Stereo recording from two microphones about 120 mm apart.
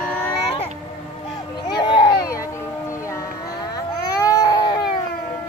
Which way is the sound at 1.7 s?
40° left (ahead or behind).